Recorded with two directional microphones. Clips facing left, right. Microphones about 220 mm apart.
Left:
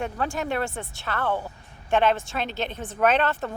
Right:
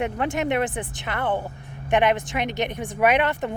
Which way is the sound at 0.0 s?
20° right (ahead or behind).